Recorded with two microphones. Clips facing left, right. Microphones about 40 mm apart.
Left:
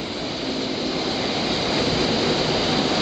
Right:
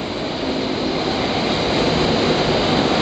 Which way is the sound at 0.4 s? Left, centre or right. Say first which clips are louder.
Right 5 dB; centre.